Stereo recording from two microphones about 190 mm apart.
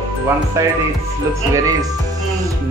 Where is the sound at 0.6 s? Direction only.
15° right (ahead or behind).